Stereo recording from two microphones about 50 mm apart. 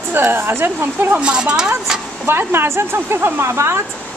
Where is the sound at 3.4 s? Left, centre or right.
Right.